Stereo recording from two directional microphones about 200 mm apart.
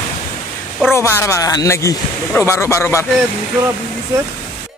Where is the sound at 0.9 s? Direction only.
15° left (ahead or behind).